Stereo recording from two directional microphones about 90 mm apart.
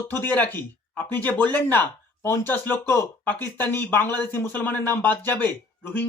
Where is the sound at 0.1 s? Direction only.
20° left (ahead or behind).